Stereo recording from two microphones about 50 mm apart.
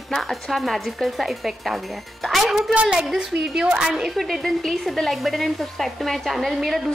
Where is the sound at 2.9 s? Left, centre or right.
Centre.